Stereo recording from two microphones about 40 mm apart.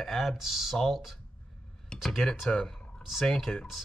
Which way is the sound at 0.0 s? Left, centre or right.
Centre.